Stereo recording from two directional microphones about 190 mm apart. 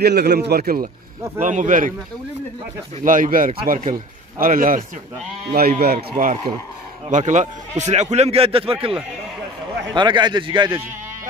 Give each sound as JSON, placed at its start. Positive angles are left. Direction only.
{"t": 0.0, "sound": "speech", "side_deg": -60}
{"t": 3.0, "sound": "speech", "side_deg": -45}
{"t": 9.9, "sound": "a man's voice", "side_deg": -25}